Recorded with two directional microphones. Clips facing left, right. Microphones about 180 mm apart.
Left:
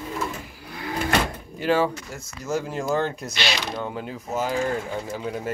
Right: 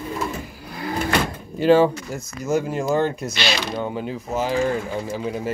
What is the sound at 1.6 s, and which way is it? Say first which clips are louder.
Speech: right 7 dB; 30° right (ahead or behind).